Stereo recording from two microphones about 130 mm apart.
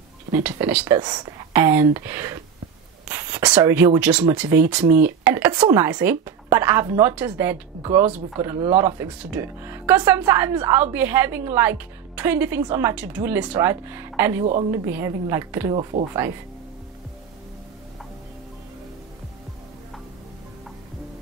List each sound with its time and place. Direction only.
0.3 s a woman's voice: 15° right (ahead or behind)
1.0 s speech: 35° right (ahead or behind)
1.5 s a woman's voice: 20° right (ahead or behind)
15.9 s speech: 80° right